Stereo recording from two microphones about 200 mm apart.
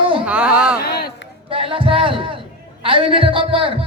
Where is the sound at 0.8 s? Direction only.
50° left (ahead or behind).